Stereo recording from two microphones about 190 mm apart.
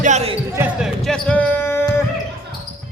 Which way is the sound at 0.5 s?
10° right (ahead or behind).